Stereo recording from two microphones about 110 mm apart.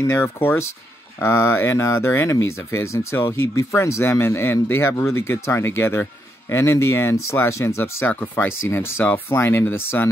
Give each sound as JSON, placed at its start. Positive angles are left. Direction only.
{"t": 0.0, "sound": "speech", "side_deg": 20}